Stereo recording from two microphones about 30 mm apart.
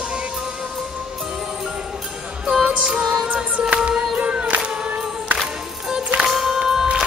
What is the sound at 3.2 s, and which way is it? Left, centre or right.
Music, right.